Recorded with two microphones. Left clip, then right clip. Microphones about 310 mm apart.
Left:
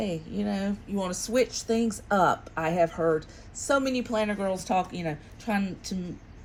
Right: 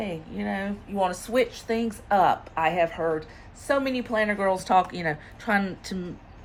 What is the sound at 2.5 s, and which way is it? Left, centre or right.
Speech, left.